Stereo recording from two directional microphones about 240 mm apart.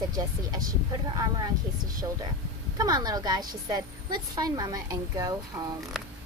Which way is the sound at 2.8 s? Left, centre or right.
Centre.